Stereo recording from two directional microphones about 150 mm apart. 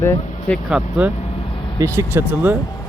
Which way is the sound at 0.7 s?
10° right (ahead or behind).